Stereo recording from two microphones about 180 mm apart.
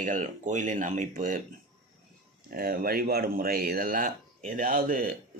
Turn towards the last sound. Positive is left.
turn(degrees=-50)  # may be behind; listen again after turning